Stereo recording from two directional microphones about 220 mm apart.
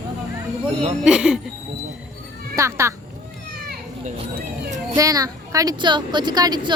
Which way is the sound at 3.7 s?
45° right (ahead or behind).